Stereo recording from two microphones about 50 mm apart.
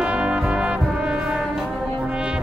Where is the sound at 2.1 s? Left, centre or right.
Centre.